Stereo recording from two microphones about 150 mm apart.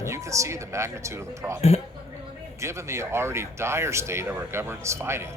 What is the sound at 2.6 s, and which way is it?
Speech, 20° right (ahead or behind).